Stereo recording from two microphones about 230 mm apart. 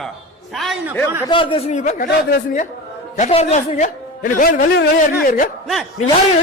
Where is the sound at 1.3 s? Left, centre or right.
Left.